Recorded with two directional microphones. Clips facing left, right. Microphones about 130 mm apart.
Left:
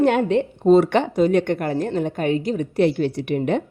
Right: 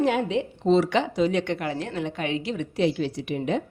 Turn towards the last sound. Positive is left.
turn(degrees=60)  # may be behind; listen again after turning